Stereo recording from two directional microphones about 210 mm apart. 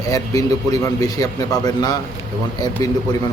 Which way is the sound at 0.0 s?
15° left (ahead or behind).